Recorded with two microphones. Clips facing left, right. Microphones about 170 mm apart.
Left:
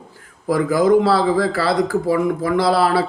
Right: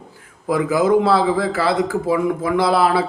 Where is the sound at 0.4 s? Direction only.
20° right (ahead or behind).